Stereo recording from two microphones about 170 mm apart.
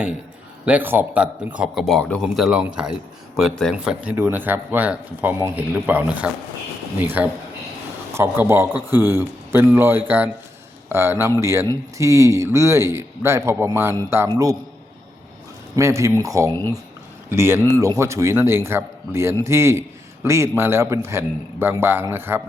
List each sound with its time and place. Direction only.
0.6 s a man's voice: 10° right (ahead or behind)
15.7 s a man's voice: 15° right (ahead or behind)